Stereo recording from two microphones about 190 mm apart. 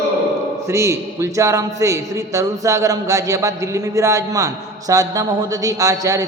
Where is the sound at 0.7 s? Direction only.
15° right (ahead or behind).